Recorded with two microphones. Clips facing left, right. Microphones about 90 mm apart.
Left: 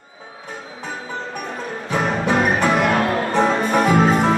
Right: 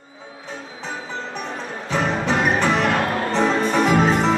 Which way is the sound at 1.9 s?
15° left (ahead or behind).